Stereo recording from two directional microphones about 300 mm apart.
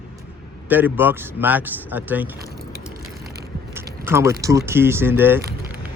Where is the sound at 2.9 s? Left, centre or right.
Right.